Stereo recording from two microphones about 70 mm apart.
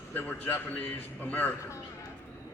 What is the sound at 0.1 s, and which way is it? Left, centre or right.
A man's voice, left.